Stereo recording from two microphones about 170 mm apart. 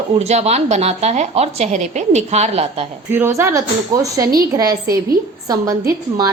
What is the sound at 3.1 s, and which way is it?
Speech, 15° right (ahead or behind).